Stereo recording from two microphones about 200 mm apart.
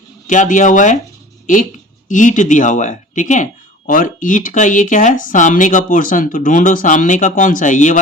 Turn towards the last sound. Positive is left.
turn(degrees=40)  # may be behind; listen again after turning